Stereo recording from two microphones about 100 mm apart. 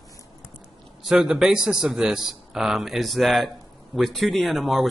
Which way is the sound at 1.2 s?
5° right (ahead or behind).